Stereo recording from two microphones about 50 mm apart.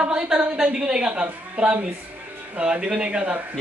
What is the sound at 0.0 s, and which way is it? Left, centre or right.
A woman's voice, centre.